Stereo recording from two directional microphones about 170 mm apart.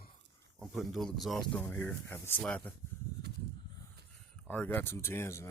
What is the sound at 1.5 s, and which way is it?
Speech, 10° left (ahead or behind).